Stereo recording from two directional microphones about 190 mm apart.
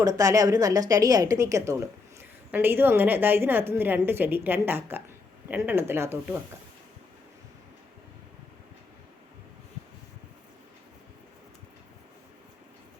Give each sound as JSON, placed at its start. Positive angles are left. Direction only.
{"t": 0.0, "sound": "a woman's voice", "side_deg": -20}